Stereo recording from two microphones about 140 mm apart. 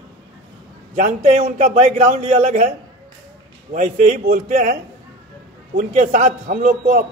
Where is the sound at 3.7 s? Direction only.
65° right (ahead or behind).